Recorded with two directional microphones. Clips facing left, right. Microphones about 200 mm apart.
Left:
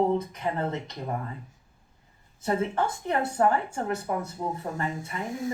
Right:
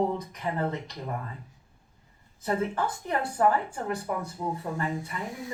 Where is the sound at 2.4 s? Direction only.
25° left (ahead or behind).